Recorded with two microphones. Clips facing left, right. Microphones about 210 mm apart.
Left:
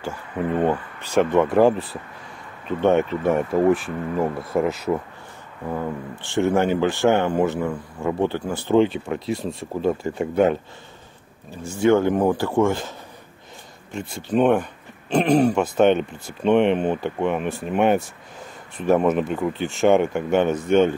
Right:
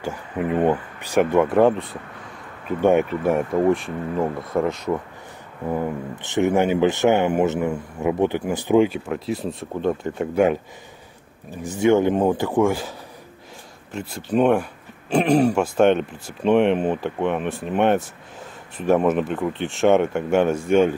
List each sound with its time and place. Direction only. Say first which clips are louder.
0.0 s a man's voice: right 1 dB; 15° right (ahead or behind); by 1.9 s centre (ahead or behind)
3.0 s speech: even; centre (ahead or behind)
6.2 s a man's voice: right 1 dB; 20° right (ahead or behind)
11.6 s a man's voice: even; 20° right (ahead or behind)
13.9 s speech: even; 5° right (ahead or behind)